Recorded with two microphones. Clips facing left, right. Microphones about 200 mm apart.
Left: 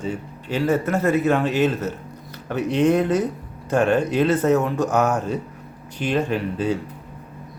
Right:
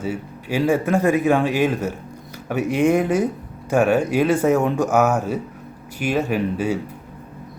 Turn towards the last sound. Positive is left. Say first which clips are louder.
# right 1 dB
turn(degrees=-10)  # may be behind; listen again after turning